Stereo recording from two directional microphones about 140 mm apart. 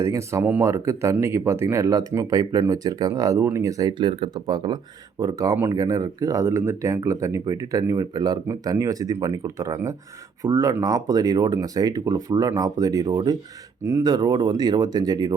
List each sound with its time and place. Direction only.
0.0 s speech: 20° right (ahead or behind)